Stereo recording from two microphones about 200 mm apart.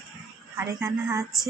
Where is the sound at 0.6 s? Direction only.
15° right (ahead or behind).